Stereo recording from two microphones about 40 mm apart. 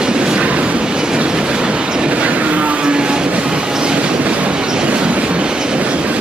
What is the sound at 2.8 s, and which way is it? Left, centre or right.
Vehicle, right.